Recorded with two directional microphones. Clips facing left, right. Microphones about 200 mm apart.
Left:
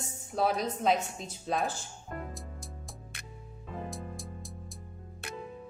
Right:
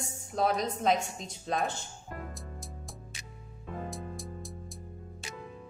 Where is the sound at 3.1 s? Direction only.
60° left (ahead or behind).